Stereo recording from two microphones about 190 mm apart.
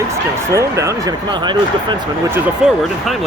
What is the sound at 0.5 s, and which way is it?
Speech, 15° right (ahead or behind).